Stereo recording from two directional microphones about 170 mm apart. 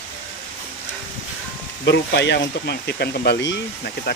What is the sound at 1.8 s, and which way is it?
Speech, 90° left.